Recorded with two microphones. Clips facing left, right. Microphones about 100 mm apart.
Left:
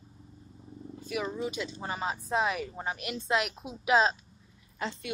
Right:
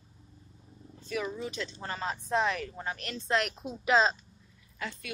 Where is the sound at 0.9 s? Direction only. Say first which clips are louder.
Left 1 dB; 10° left (ahead or behind).